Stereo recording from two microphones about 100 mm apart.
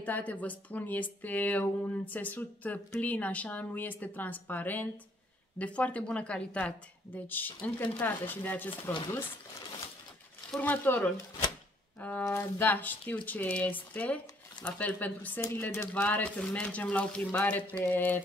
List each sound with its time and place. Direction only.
0.0 s a woman's voice: 15° left (ahead or behind)
10.6 s a woman's voice: 15° left (ahead or behind)